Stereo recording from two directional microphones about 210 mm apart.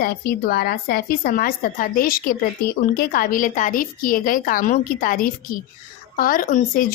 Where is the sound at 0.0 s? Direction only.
45° left (ahead or behind).